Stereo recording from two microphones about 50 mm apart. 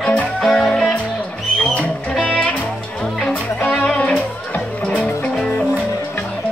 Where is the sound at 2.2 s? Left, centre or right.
Centre.